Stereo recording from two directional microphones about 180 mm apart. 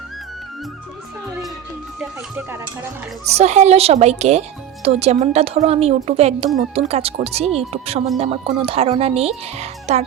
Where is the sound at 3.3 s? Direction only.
40° right (ahead or behind).